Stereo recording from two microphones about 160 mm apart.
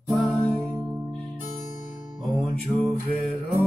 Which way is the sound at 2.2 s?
Centre (ahead or behind).